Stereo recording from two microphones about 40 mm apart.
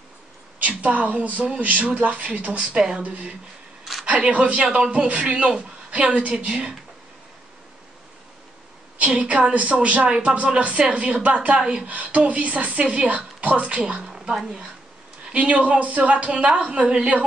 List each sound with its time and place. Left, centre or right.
0.6 s a woman's voice: right
2.7 s speech: centre
3.0 s a woman's voice: right
4.7 s a woman's voice: right
8.9 s a woman's voice: right
11.9 s a woman's voice: right
13.8 s speech: right
14.3 s speech: centre
15.3 s a woman's voice: right